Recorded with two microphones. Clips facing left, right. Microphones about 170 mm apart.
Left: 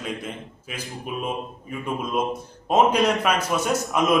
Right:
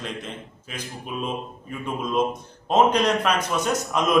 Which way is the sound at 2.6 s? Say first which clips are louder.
Even; 10° left (ahead or behind).